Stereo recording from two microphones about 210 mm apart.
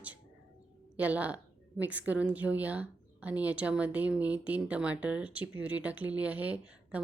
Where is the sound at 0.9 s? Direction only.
5° right (ahead or behind).